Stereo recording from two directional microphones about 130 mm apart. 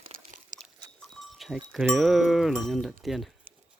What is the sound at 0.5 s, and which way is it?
Biting, 75° right (ahead or behind).